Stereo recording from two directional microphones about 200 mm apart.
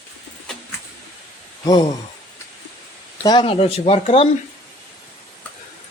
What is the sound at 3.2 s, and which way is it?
Speech, 20° left (ahead or behind).